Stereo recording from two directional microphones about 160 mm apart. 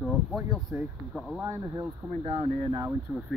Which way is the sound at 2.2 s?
35° right (ahead or behind).